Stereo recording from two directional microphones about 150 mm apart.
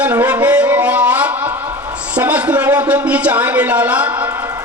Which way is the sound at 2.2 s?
10° right (ahead or behind).